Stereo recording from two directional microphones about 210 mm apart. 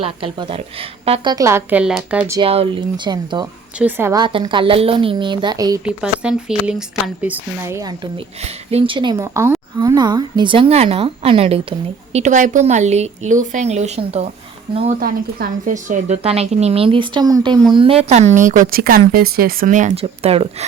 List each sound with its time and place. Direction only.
0.0 s a woman's voice: 25° right (ahead or behind); by 2.4 s 10° right (ahead or behind)
2.4 s a woman's voice: 25° right (ahead or behind)
3.8 s a woman's voice: 10° right (ahead or behind)
5.8 s speech: 5° right (ahead or behind)
8.4 s a woman's voice: 30° right (ahead or behind)
15.0 s a woman's voice: 40° right (ahead or behind)